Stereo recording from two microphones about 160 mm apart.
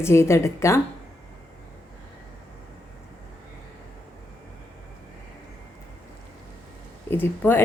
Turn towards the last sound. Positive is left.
turn(degrees=15)  # may be behind; listen again after turning